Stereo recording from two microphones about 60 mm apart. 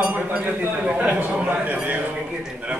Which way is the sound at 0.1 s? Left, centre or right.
Right.